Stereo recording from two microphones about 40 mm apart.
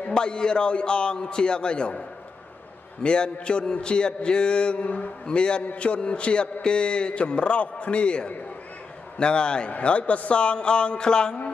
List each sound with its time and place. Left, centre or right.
0.1 s a man's voice: left
4.8 s speech: left
5.2 s a man's voice: left